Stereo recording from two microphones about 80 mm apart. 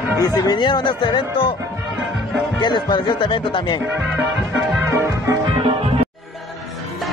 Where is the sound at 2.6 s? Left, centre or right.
Left.